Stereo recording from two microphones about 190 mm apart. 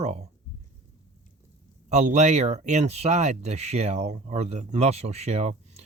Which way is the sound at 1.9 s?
35° right (ahead or behind).